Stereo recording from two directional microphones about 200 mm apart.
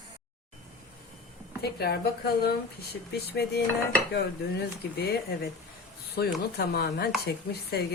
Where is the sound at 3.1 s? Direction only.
55° left (ahead or behind).